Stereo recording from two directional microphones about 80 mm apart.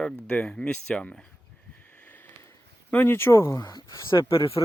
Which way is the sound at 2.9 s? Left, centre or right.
Left.